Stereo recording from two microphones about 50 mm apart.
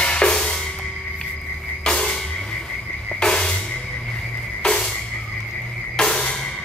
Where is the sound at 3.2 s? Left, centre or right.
Centre.